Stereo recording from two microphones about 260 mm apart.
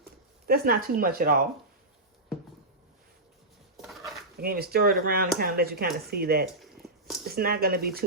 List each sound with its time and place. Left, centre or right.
0.0 s speech: right
3.8 s a sound: centre
4.4 s speech: right